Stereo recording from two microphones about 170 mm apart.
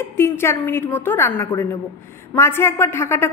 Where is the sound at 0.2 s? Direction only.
15° left (ahead or behind).